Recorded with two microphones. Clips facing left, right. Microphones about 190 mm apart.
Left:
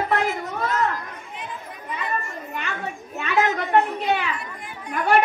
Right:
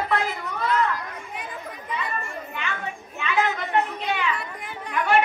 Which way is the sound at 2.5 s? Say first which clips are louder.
Left 3 dB; 45° left (ahead or behind).